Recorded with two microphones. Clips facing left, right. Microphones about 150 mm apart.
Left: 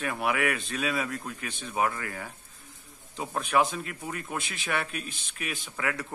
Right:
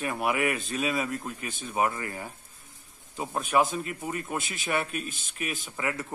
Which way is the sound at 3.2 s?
Centre (ahead or behind).